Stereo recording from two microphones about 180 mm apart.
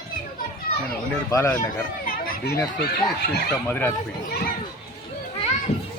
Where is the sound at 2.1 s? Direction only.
55° left (ahead or behind).